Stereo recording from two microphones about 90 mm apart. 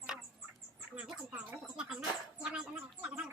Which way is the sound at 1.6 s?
5° right (ahead or behind).